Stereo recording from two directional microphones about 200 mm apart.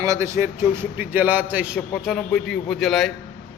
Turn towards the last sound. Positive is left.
turn(degrees=0)  # may be behind; listen again after turning